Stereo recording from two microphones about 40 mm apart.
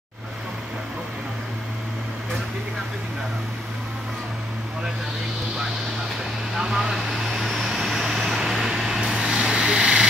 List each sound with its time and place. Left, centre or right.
6.7 s vehicle: centre